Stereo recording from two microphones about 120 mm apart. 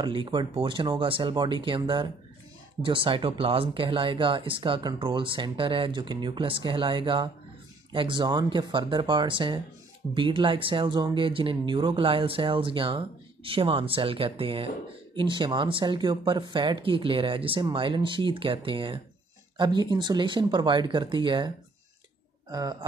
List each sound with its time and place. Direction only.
0.0 s speech: 45° right (ahead or behind)
22.5 s speech: 30° right (ahead or behind)